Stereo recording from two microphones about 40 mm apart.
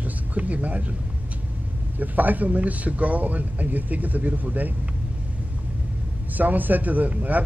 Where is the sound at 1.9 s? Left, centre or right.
Right.